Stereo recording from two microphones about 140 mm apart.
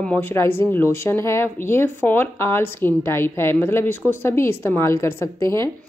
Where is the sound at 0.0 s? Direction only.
10° left (ahead or behind).